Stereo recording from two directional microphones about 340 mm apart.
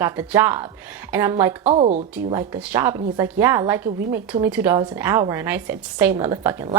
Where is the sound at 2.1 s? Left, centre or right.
Centre.